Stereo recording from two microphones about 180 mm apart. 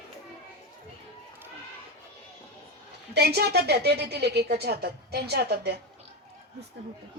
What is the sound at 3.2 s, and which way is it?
A woman's voice, 65° right (ahead or behind).